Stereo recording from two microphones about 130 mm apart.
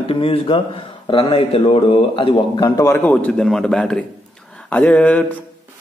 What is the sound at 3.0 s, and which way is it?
Speech, 10° left (ahead or behind).